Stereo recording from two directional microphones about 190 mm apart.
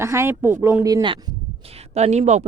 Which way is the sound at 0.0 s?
15° right (ahead or behind).